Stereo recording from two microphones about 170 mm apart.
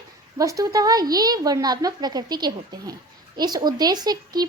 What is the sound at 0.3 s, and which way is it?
Speech, 20° right (ahead or behind).